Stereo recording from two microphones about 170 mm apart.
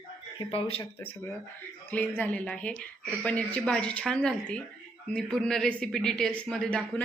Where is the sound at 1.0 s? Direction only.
15° left (ahead or behind).